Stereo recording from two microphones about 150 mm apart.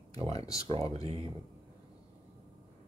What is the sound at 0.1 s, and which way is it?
Speech, 40° right (ahead or behind).